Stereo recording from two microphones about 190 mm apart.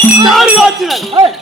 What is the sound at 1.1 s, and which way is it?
Speech, 30° right (ahead or behind).